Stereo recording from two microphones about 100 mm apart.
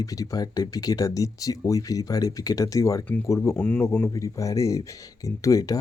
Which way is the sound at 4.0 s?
30° left (ahead or behind).